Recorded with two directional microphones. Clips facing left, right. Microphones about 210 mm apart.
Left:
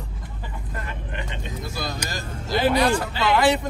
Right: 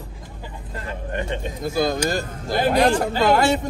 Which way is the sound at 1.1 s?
50° right (ahead or behind).